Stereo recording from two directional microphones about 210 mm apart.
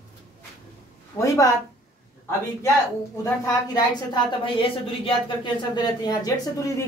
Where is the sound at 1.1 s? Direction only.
15° left (ahead or behind).